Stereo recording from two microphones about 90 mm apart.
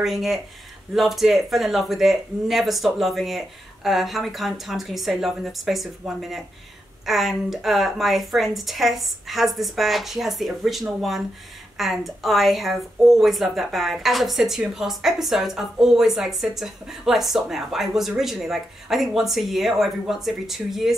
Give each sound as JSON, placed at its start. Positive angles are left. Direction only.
{"t": 0.0, "sound": "a woman's voice", "side_deg": 0}